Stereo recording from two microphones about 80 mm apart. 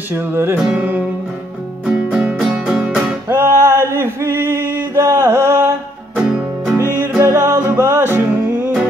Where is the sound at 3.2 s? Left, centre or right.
Right.